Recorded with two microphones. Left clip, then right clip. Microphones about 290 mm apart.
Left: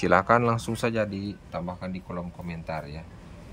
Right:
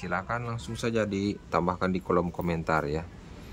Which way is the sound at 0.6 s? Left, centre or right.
Centre.